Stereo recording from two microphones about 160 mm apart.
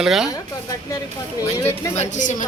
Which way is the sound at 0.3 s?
20° left (ahead or behind).